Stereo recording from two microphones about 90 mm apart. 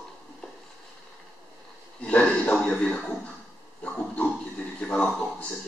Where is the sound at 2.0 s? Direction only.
15° left (ahead or behind).